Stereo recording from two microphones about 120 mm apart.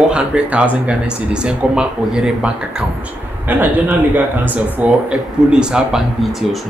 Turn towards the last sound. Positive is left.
turn(degrees=-5)  # may be behind; listen again after turning